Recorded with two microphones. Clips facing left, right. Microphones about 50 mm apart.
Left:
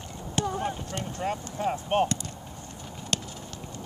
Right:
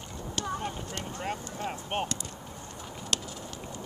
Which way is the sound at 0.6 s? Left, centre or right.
Centre.